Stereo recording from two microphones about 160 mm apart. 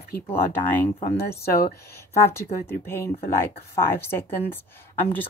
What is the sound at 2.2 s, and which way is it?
Speech, 15° left (ahead or behind).